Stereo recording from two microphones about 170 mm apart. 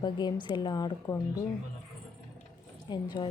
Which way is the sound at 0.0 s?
25° left (ahead or behind).